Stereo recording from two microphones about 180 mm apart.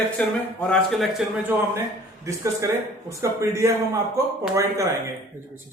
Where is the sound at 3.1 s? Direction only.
15° right (ahead or behind).